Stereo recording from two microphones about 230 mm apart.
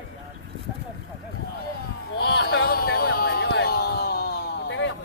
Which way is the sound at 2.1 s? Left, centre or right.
Left.